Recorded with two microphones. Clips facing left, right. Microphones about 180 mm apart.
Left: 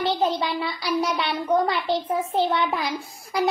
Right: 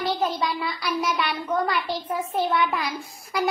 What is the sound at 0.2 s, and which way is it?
A child's voice, 25° left (ahead or behind).